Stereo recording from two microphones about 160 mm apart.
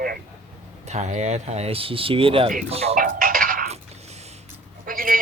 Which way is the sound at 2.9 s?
60° right (ahead or behind).